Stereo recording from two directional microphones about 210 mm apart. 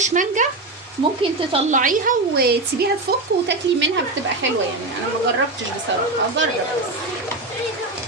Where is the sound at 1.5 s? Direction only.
35° right (ahead or behind).